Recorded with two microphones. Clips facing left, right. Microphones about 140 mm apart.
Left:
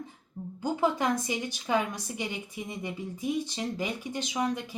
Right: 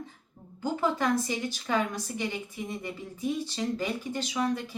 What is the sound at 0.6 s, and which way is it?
Speech, 15° left (ahead or behind).